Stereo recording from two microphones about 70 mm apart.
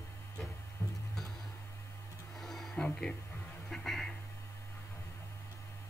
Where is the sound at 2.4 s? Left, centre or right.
Centre.